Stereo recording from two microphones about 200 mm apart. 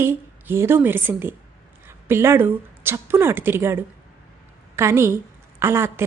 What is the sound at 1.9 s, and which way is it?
A woman's voice, 10° right (ahead or behind).